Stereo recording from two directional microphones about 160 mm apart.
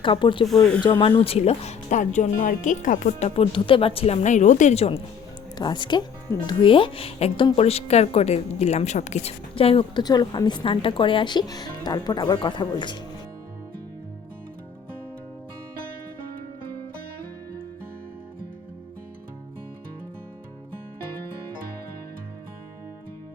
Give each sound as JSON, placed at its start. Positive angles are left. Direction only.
{"t": 0.0, "sound": "speech", "side_deg": 30}
{"t": 0.4, "sound": "speech", "side_deg": 5}
{"t": 0.8, "sound": "speech", "side_deg": 30}
{"t": 5.5, "sound": "speech", "side_deg": 30}